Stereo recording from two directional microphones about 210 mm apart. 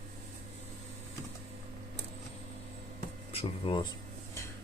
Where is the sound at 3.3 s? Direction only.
25° left (ahead or behind).